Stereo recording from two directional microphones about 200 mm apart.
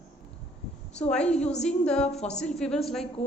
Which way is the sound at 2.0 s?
35° left (ahead or behind).